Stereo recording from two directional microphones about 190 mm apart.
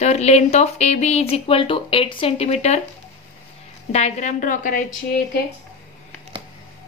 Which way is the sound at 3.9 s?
35° left (ahead or behind).